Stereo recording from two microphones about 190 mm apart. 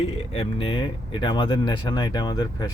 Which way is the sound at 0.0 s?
30° left (ahead or behind).